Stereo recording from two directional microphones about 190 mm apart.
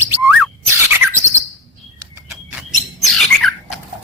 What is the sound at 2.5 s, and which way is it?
Bird, centre (ahead or behind).